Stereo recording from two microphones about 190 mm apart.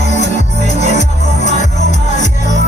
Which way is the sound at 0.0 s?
40° left (ahead or behind).